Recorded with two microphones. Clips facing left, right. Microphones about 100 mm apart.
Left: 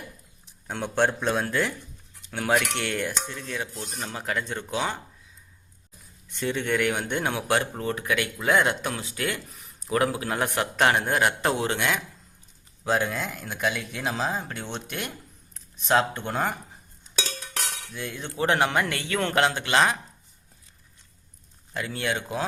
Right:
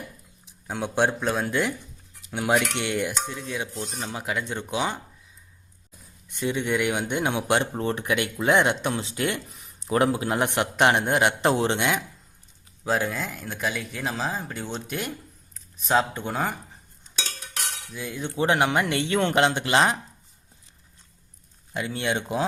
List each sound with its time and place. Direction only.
0.7 s speech: 10° right (ahead or behind)
6.4 s a man's voice: 15° right (ahead or behind)
12.8 s speech: centre (ahead or behind)
17.9 s a man's voice: 10° right (ahead or behind); by 20.0 s 25° right (ahead or behind)
21.7 s a man's voice: 20° right (ahead or behind)